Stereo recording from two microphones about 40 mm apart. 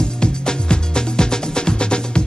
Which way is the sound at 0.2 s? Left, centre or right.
Left.